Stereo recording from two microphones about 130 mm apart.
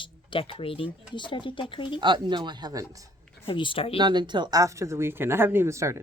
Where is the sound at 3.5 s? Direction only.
40° left (ahead or behind).